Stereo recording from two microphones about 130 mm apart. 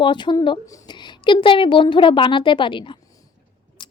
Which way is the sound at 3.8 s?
35° left (ahead or behind).